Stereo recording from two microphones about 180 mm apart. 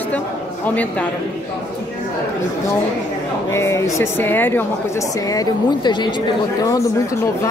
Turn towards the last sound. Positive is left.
turn(degrees=25)  # may be behind; listen again after turning